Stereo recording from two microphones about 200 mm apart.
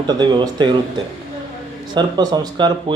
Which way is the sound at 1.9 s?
20° right (ahead or behind).